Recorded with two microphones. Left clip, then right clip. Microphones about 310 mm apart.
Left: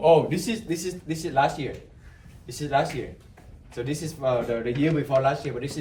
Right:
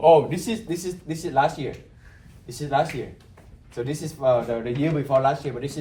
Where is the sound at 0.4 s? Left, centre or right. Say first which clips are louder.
Right 1 dB; centre.